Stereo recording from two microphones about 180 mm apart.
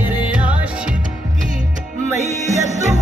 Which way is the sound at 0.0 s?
5° right (ahead or behind).